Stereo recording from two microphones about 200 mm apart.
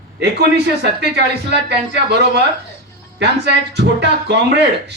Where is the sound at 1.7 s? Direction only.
55° right (ahead or behind).